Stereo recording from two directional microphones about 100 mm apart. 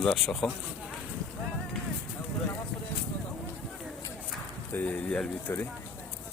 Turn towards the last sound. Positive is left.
turn(degrees=20)  # may be behind; listen again after turning